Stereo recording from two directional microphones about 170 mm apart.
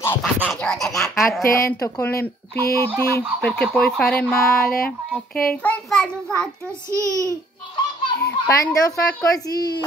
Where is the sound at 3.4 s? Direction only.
5° left (ahead or behind).